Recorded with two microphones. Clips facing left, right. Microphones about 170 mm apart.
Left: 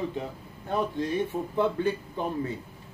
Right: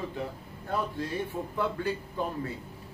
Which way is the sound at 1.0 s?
20° left (ahead or behind).